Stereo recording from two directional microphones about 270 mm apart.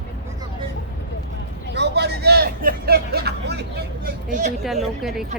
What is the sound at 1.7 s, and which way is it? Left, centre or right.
Speech, right.